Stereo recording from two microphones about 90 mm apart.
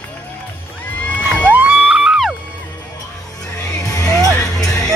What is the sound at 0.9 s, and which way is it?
Children shouting, 15° left (ahead or behind).